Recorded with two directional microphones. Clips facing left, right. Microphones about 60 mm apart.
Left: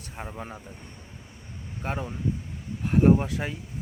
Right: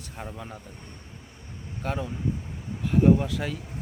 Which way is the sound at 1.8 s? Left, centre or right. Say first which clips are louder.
Right 1 dB; left.